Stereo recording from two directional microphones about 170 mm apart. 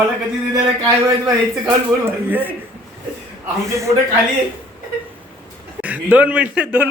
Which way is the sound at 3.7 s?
15° right (ahead or behind).